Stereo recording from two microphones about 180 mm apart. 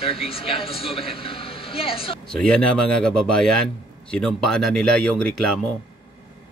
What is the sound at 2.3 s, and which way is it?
A man's voice, 5° left (ahead or behind).